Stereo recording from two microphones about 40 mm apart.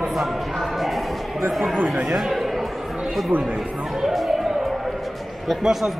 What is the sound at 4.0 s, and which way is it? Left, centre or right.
Chatter, centre.